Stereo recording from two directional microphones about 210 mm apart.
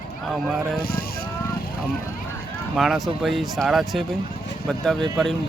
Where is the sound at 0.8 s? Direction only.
45° left (ahead or behind).